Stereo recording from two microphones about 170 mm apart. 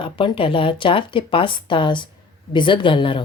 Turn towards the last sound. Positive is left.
turn(degrees=30)  # may be behind; listen again after turning